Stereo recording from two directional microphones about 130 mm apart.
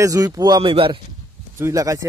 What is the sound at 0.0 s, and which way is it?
Speech, 25° right (ahead or behind).